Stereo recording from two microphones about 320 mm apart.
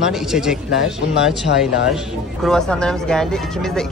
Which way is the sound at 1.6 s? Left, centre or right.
Centre.